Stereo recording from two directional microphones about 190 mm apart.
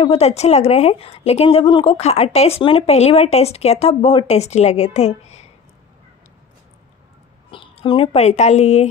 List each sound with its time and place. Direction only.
0.0 s a woman's voice: 30° left (ahead or behind)
7.5 s speech: 25° left (ahead or behind)